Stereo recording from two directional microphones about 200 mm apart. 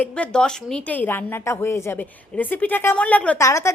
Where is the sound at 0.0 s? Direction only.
5° left (ahead or behind).